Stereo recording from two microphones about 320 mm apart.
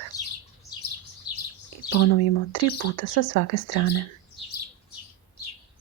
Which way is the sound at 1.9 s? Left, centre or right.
Left.